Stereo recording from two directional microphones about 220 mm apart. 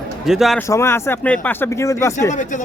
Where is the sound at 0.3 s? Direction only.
Centre (ahead or behind).